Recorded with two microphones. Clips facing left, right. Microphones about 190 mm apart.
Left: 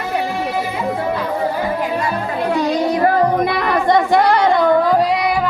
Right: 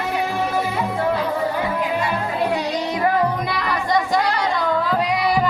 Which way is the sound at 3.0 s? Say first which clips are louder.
Left 3 dB; 50° left (ahead or behind).